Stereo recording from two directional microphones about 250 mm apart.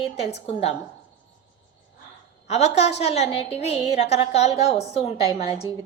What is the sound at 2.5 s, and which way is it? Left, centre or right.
Speech, left.